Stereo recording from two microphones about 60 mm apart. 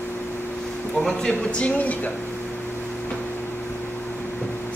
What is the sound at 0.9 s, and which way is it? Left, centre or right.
Music, centre.